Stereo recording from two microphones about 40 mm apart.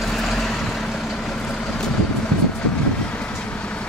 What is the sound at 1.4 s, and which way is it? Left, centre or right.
Vehicle, left.